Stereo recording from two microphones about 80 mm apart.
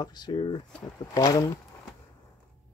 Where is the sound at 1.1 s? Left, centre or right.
Left.